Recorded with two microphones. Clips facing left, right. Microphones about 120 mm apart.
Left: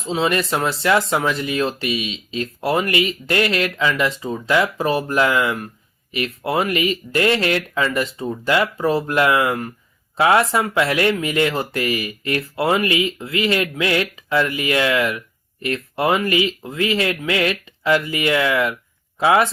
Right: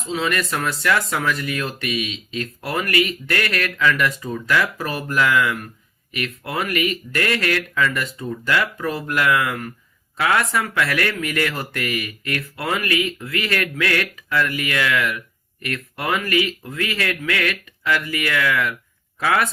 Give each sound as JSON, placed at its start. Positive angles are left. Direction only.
{"t": 0.0, "sound": "speech", "side_deg": 30}